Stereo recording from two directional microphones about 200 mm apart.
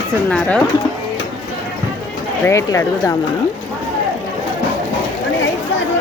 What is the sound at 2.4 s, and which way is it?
Speech, 15° left (ahead or behind).